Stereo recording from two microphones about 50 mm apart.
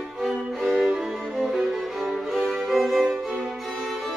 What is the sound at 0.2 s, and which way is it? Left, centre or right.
Music, centre.